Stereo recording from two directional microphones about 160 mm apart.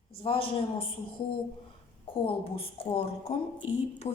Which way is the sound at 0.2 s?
35° left (ahead or behind).